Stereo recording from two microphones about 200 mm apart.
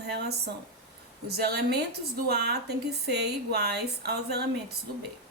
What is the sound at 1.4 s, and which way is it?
A woman's voice, 55° right (ahead or behind).